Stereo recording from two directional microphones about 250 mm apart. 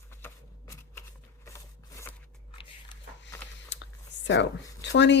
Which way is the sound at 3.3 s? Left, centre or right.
Centre.